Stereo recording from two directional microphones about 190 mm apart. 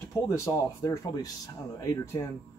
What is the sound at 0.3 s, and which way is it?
Speech, 15° left (ahead or behind).